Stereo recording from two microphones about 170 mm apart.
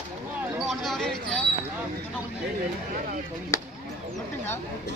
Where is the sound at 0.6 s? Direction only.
Centre (ahead or behind).